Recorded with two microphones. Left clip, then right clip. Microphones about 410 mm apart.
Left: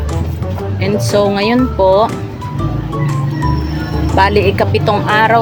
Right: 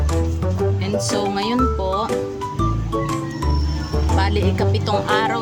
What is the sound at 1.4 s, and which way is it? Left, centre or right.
Speech, right.